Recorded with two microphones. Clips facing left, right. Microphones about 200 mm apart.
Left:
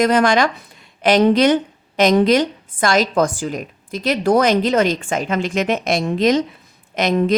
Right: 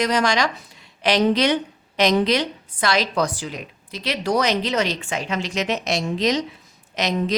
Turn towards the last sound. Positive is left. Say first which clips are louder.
# left 6 dB
turn(degrees=55)  # may be behind; listen again after turning